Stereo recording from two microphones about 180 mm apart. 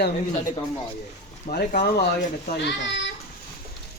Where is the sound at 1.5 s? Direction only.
55° left (ahead or behind).